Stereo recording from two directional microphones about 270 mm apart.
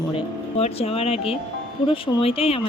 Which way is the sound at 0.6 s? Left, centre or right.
Left.